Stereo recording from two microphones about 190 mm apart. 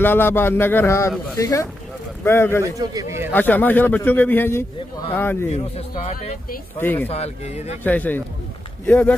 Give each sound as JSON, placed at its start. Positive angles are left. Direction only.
{"t": 0.0, "sound": "a man's voice", "side_deg": 10}
{"t": 2.6, "sound": "a man's voice", "side_deg": -20}
{"t": 3.3, "sound": "a man's voice", "side_deg": 10}
{"t": 5.5, "sound": "a man's voice", "side_deg": 35}
{"t": 6.8, "sound": "a man's voice", "side_deg": 10}
{"t": 7.1, "sound": "a man's voice", "side_deg": 35}
{"t": 7.8, "sound": "a man's voice", "side_deg": 10}